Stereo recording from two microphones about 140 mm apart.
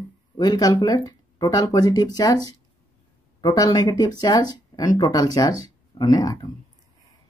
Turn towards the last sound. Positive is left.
turn(degrees=25)  # may be behind; listen again after turning